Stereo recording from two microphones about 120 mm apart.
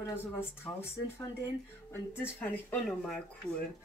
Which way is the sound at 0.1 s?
20° left (ahead or behind).